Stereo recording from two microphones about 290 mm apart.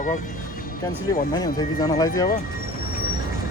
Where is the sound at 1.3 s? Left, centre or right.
Centre.